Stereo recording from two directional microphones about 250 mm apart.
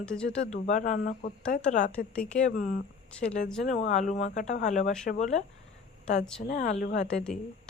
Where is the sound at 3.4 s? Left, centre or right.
Centre.